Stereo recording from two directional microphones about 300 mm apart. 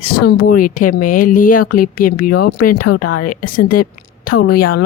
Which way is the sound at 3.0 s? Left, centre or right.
Left.